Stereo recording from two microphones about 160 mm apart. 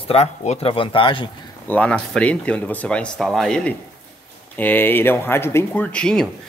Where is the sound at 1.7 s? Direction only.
10° left (ahead or behind).